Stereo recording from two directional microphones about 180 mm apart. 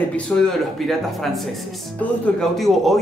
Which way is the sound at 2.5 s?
Centre (ahead or behind).